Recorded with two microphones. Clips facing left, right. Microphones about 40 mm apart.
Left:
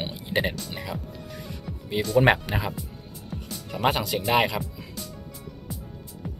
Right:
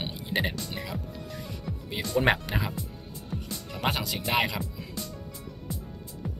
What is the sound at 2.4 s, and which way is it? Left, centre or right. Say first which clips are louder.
Speech: left 2 dB; centre.